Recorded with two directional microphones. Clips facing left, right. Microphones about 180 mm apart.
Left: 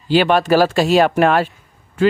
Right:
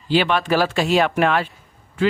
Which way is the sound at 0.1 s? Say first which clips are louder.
Left 5 dB; 45° left (ahead or behind).